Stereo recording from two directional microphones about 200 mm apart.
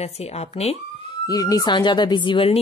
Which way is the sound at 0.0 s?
30° left (ahead or behind).